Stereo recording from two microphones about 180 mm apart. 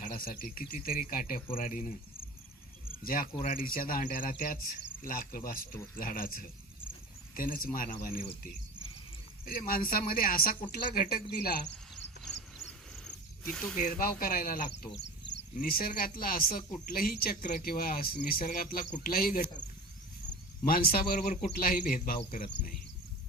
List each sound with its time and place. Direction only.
0.0 s speech: 50° left (ahead or behind)
3.0 s speech: 50° left (ahead or behind)
9.5 s speech: 50° left (ahead or behind)
13.1 s snake: 5° left (ahead or behind)
13.7 s speech: 50° left (ahead or behind)
14.9 s speech: 75° left (ahead or behind); by 19.5 s 55° left (ahead or behind)
20.7 s speech: 55° left (ahead or behind)